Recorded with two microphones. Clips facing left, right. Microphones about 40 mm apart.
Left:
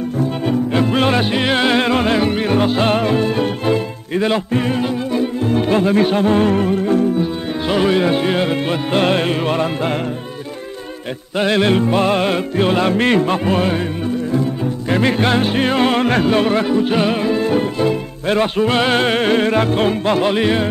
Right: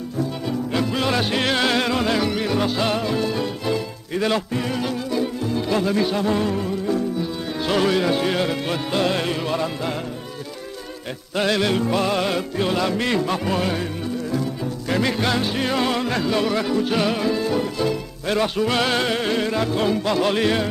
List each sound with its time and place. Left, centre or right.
0.2 s music: left
5.4 s music: left
7.6 s speech: left
11.3 s speech: left
14.3 s music: left
16.6 s speech: left
20.2 s music: left